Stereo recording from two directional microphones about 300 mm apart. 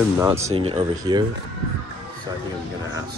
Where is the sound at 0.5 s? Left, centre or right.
Centre.